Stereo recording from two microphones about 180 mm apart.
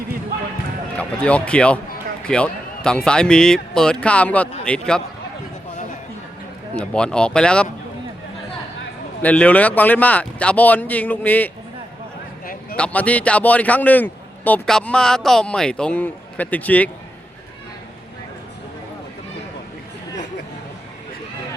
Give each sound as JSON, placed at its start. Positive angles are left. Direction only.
{"t": 0.9, "sound": "a man's voice", "side_deg": 5}
{"t": 6.7, "sound": "speech", "side_deg": 5}
{"t": 9.2, "sound": "a man's voice", "side_deg": 5}
{"t": 12.7, "sound": "a man's voice", "side_deg": 5}